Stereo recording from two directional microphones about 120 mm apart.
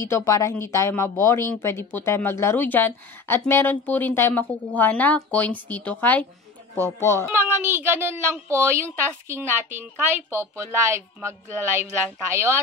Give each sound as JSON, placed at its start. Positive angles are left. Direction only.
{"t": 0.0, "sound": "a woman's voice", "side_deg": 25}
{"t": 7.3, "sound": "a woman's voice", "side_deg": -20}